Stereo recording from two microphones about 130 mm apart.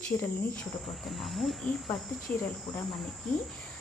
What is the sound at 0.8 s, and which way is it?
Cricket, centre (ahead or behind).